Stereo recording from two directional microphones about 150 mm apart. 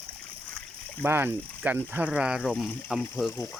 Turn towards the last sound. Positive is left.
turn(degrees=20)  # may be behind; listen again after turning